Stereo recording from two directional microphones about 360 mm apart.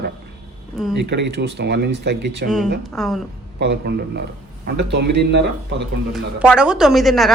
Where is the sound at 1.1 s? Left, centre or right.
Right.